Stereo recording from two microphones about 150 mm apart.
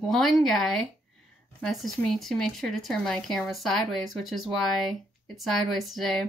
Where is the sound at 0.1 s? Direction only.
Centre (ahead or behind).